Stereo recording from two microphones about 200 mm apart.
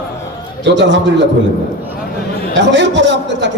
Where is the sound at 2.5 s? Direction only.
60° right (ahead or behind).